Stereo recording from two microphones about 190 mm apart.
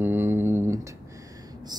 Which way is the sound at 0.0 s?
10° right (ahead or behind).